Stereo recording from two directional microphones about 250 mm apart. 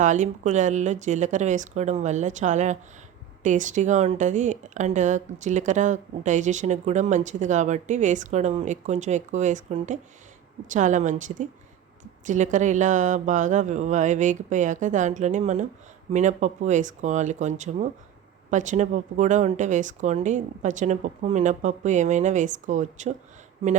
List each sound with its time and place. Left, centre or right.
0.0 s speech: right